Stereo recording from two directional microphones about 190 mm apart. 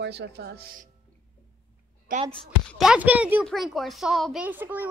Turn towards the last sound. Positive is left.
turn(degrees=-10)  # may be behind; listen again after turning